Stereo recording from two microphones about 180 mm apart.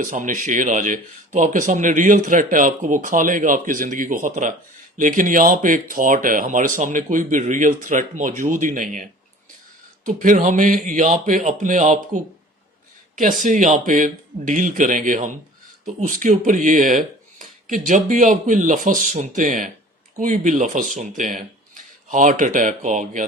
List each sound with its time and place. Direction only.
0.0 s speech: 45° right (ahead or behind)
10.1 s speech: 45° right (ahead or behind)